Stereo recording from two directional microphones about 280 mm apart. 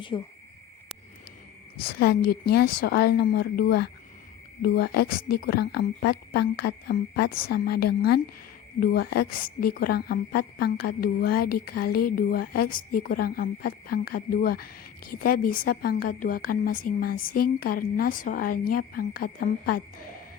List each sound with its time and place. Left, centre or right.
0.1 s speech: centre
1.8 s speech: left